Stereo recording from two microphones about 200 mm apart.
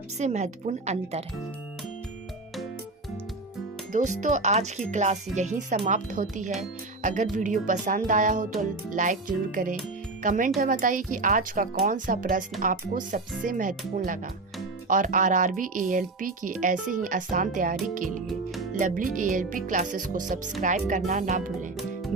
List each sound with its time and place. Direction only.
0.2 s a woman's voice: 35° right (ahead or behind)
3.9 s a woman's voice: 40° right (ahead or behind)
18.3 s music: centre (ahead or behind)
18.8 s a woman's voice: 40° right (ahead or behind)